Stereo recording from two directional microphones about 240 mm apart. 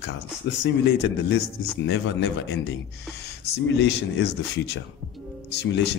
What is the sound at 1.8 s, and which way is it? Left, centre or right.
Speech, left.